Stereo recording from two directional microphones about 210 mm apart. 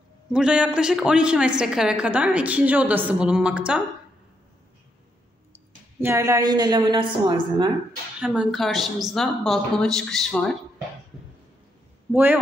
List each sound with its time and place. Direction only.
0.3 s a woman's voice: 5° right (ahead or behind)
5.5 s a woman's voice: 10° right (ahead or behind)
8.3 s a woman's voice: centre (ahead or behind)
12.1 s a man's voice: 5° right (ahead or behind)